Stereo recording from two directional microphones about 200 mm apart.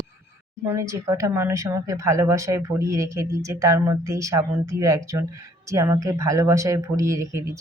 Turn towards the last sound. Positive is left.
turn(degrees=-15)  # may be behind; listen again after turning